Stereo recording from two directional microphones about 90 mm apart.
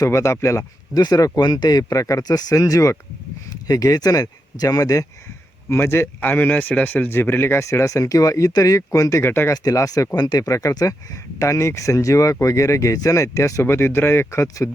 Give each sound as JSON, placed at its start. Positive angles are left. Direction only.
{"t": 0.0, "sound": "speech", "side_deg": 35}
{"t": 1.0, "sound": "speech", "side_deg": 45}
{"t": 5.6, "sound": "a man's voice", "side_deg": 25}